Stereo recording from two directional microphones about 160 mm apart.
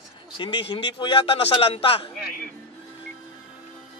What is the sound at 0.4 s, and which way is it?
A man's voice, 30° left (ahead or behind).